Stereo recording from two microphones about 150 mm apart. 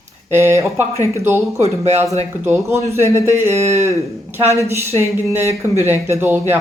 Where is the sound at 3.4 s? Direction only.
45° right (ahead or behind).